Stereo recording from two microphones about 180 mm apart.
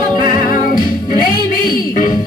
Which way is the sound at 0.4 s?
50° left (ahead or behind).